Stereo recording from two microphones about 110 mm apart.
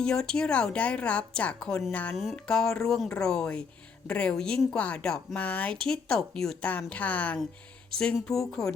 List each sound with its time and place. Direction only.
0.0 s speech: 5° left (ahead or behind)